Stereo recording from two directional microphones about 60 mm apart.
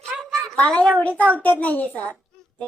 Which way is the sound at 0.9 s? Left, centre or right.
Left.